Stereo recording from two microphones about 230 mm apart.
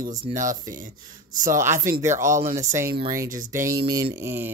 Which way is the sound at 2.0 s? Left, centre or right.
Centre.